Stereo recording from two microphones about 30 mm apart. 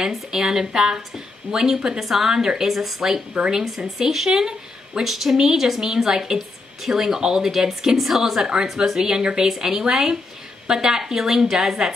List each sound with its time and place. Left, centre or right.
0.1 s speech: centre
5.0 s speech: centre